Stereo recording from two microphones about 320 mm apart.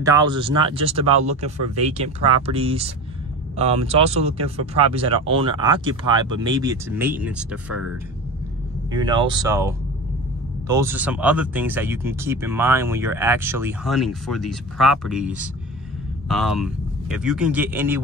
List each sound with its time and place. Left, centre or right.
0.0 s speech: centre
8.9 s a man's voice: centre